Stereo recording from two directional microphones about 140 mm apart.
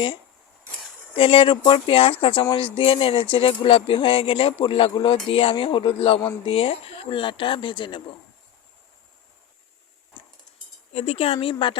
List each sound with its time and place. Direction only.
1.1 s speech: 40° left (ahead or behind)
10.9 s speech: 45° left (ahead or behind)